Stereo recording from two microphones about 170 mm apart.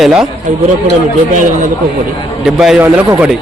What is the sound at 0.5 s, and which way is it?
A man's voice, 45° right (ahead or behind).